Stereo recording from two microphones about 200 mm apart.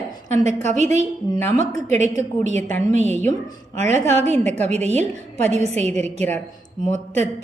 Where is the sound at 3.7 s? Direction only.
35° right (ahead or behind).